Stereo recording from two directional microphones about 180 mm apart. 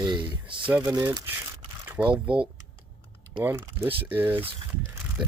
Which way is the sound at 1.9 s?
10° right (ahead or behind).